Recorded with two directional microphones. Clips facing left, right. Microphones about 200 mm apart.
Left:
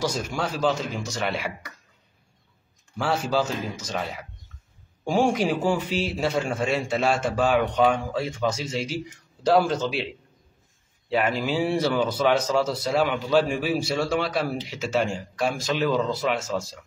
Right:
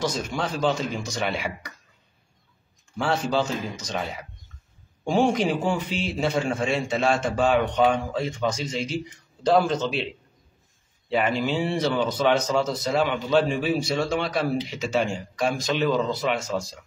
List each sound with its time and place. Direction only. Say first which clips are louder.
0.0 s speech: even; 10° left (ahead or behind)
3.0 s a man's voice: even; 5° left (ahead or behind)
11.1 s speech: even; 5° left (ahead or behind)